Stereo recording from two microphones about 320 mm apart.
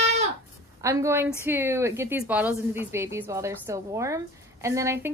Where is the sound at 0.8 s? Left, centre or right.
Centre.